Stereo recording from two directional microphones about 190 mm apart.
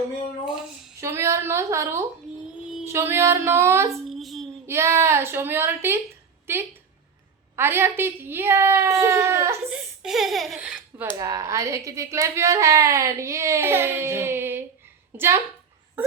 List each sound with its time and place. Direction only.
0.4 s speech: centre (ahead or behind)
1.0 s a woman's voice: 15° right (ahead or behind)
4.1 s a child's voice: centre (ahead or behind)
4.6 s a woman's voice: 15° right (ahead or behind)
11.2 s a woman's voice: 20° right (ahead or behind)
16.0 s a sound: 10° right (ahead or behind)